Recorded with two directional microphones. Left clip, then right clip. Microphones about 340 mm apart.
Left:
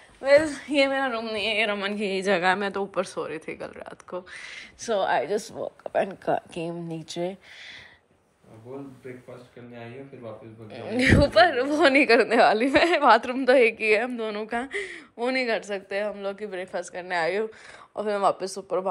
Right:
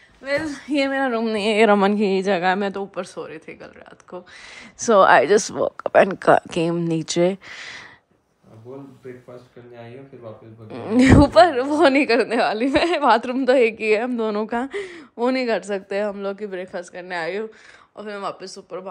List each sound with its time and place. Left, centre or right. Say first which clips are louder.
0.2 s a woman's voice: left 5 dB; centre
4.8 s speech: right 11 dB; right
6.8 s speech: right 11 dB; right
10.7 s a woman's voice: right 6 dB; centre